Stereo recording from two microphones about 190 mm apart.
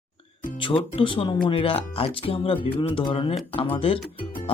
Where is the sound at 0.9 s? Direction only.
25° left (ahead or behind).